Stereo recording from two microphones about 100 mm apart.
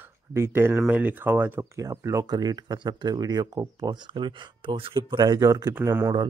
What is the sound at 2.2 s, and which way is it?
Speech, 45° right (ahead or behind).